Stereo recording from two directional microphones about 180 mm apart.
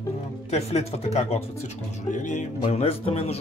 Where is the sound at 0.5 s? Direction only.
35° left (ahead or behind).